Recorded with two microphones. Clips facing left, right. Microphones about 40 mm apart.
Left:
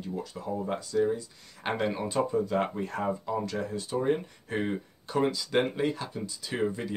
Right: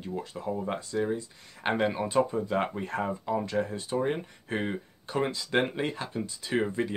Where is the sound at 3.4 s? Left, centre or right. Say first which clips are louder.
Right 2 dB; right.